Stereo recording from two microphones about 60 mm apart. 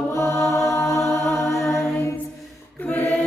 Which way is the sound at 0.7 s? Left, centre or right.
Left.